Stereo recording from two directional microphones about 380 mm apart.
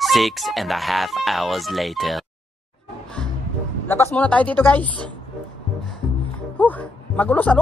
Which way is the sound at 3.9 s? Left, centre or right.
Centre.